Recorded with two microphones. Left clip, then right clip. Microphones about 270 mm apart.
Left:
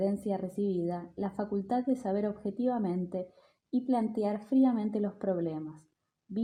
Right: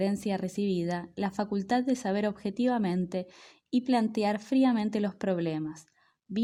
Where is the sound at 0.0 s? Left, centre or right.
Right.